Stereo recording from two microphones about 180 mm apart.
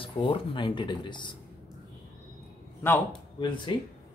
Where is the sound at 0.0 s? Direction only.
30° left (ahead or behind).